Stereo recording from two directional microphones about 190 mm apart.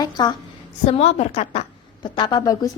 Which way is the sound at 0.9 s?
35° left (ahead or behind).